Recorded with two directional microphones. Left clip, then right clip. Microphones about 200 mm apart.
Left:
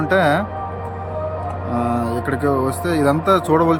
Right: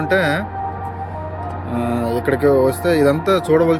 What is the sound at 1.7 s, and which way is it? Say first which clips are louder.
A man's voice: even; 10° left (ahead or behind).